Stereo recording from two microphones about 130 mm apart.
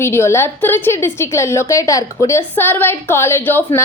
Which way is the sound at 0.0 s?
20° left (ahead or behind).